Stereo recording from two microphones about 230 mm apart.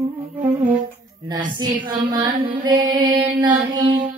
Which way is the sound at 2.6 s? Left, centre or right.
Centre.